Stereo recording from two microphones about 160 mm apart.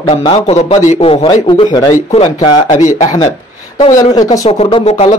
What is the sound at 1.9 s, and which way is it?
Speech, 40° left (ahead or behind).